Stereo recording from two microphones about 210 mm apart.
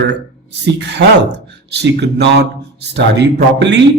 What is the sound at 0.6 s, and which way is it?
A man's voice, 55° right (ahead or behind).